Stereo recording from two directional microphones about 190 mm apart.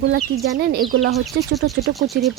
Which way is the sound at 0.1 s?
55° right (ahead or behind).